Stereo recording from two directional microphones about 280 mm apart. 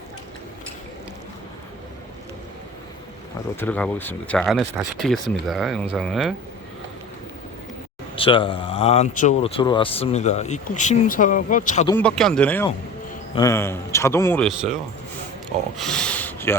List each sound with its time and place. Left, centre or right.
3.6 s speech: centre
8.1 s speech: centre
11.9 s a man's voice: centre
15.8 s rub: centre